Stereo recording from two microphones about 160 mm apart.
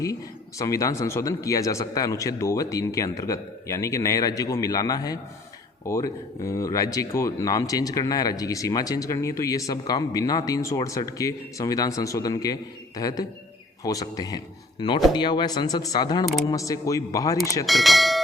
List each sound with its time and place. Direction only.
0.6 s speech: 20° left (ahead or behind)
17.7 s speech: centre (ahead or behind)